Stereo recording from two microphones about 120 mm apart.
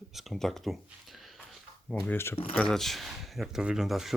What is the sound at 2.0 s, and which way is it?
Speech, 20° left (ahead or behind).